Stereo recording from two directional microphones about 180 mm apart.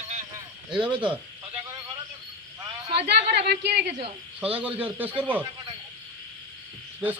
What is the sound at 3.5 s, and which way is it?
Speech, 65° right (ahead or behind).